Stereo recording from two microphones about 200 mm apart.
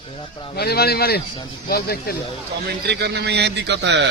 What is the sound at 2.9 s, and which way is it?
A man's voice, 55° right (ahead or behind).